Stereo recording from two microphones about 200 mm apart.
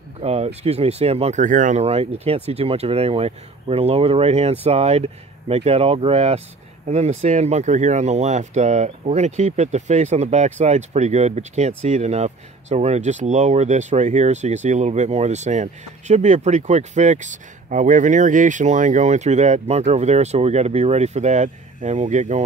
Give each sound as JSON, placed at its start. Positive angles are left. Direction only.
{"t": 0.2, "sound": "speech", "side_deg": -30}